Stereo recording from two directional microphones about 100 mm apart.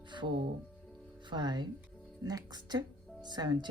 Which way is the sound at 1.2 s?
50° right (ahead or behind).